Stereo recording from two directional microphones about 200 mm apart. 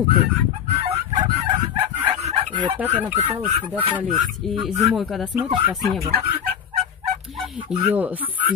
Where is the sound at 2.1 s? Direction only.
30° right (ahead or behind).